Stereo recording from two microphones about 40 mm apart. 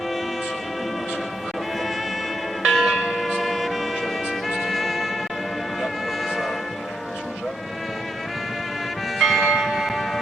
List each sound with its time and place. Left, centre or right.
2.6 s church bell: centre
3.1 s music: centre
5.8 s vehicle: centre
9.1 s church bell: centre